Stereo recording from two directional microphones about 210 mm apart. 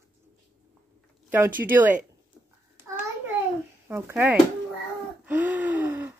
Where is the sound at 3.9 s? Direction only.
5° right (ahead or behind).